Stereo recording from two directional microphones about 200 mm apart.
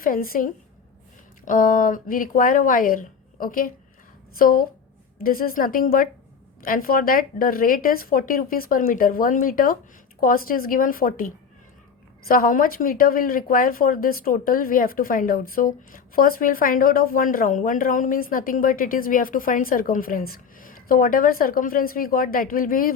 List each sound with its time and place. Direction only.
0.0 s speech: 45° left (ahead or behind)
12.3 s speech: 45° left (ahead or behind)